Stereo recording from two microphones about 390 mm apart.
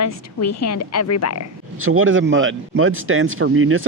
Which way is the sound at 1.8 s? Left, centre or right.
Right.